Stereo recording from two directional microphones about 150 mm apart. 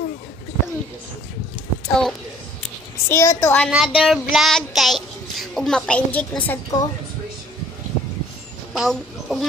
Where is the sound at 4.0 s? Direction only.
Centre (ahead or behind).